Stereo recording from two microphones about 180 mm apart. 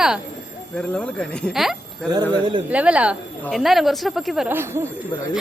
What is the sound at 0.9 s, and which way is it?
A woman's voice, 5° left (ahead or behind).